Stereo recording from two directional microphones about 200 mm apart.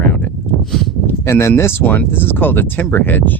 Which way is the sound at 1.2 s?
15° left (ahead or behind).